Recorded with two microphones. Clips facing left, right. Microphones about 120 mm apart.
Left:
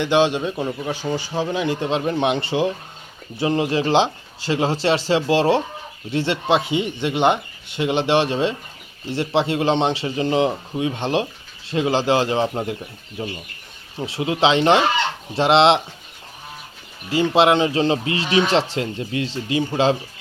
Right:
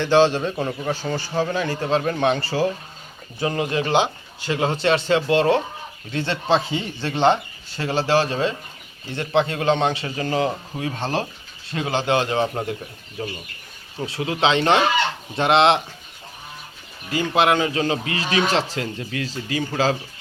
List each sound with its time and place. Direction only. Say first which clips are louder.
0.0 s speech: right 1 dB; 15° left (ahead or behind)
17.1 s speech: left 3 dB; 25° left (ahead or behind)